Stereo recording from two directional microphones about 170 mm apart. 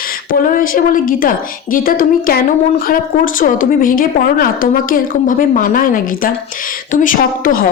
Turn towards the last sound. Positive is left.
turn(degrees=55)  # may be behind; listen again after turning